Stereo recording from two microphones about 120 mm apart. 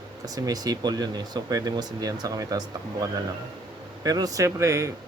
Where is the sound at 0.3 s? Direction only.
30° right (ahead or behind).